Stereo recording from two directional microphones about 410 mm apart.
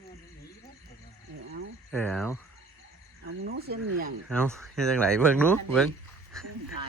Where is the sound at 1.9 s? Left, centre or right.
Centre.